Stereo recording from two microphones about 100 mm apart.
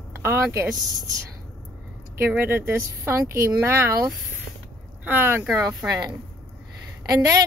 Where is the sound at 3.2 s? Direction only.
35° right (ahead or behind).